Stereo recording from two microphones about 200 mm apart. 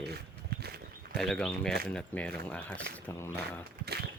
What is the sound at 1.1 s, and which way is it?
Speech, centre (ahead or behind).